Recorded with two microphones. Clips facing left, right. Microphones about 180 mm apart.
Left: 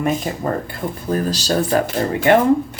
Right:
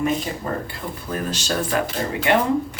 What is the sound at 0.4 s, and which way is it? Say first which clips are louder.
Speech: left 6 dB; 60° left (ahead or behind).